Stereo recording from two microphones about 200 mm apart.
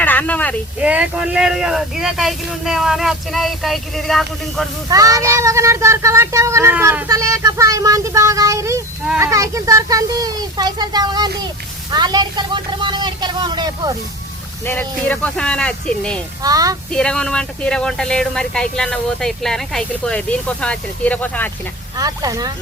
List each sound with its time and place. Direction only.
0.0 s a sound: 10° left (ahead or behind)
0.8 s speech: 5° right (ahead or behind)
4.9 s speech: 15° right (ahead or behind)
14.6 s speech: 10° left (ahead or behind)
16.4 s speech: 20° right (ahead or behind)
16.9 s speech: 5° left (ahead or behind)
21.9 s speech: 20° right (ahead or behind)